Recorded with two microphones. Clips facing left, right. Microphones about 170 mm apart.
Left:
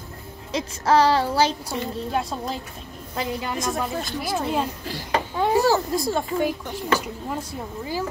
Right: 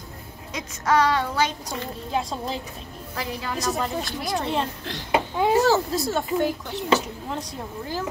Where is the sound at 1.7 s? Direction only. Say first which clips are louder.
Left 3 dB; centre (ahead or behind).